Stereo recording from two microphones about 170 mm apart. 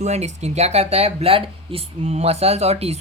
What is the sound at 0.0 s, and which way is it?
Speech, 40° right (ahead or behind).